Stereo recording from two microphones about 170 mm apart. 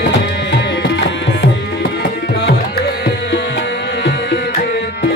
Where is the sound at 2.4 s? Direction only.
80° left.